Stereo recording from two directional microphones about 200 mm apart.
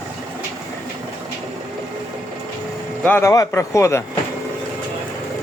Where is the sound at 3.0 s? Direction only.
10° left (ahead or behind).